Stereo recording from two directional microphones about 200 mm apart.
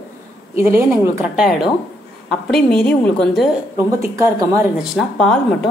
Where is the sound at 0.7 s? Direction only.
10° right (ahead or behind); by 3.4 s 5° left (ahead or behind).